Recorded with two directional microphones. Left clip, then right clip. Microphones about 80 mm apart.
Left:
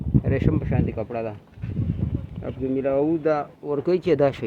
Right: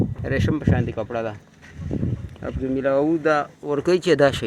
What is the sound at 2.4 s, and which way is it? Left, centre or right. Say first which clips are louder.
Speech: right 2 dB; centre.